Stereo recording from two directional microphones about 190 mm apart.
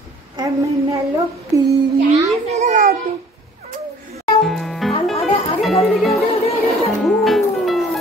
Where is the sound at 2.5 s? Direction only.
40° right (ahead or behind).